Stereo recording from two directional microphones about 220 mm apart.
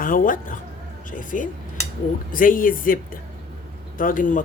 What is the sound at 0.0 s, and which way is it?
A man's voice, 40° left (ahead or behind).